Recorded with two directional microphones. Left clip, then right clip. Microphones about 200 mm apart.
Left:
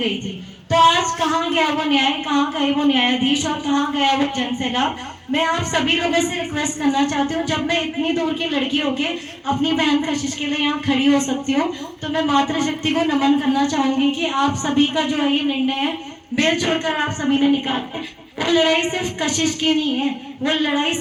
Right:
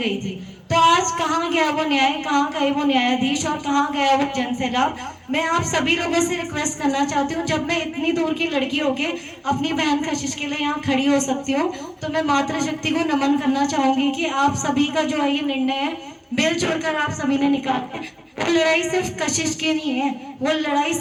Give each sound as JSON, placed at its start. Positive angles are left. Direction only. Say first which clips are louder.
{"t": 0.7, "sound": "a woman's voice", "louder": "left 2 dB", "side_deg": -35}